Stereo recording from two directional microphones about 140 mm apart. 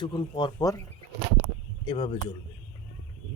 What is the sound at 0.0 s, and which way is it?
Speech, 35° left (ahead or behind).